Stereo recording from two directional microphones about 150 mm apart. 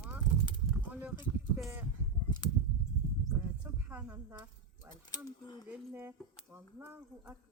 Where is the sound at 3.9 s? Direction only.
15° right (ahead or behind).